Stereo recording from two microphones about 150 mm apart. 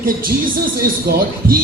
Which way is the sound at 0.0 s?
70° right (ahead or behind).